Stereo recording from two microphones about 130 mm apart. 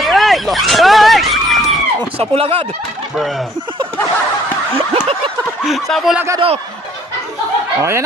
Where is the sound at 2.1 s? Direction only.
45° right (ahead or behind).